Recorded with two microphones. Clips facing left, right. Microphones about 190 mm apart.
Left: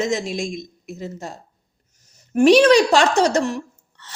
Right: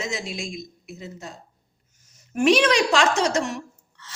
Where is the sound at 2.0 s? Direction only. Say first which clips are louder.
Left 6 dB; 35° left (ahead or behind).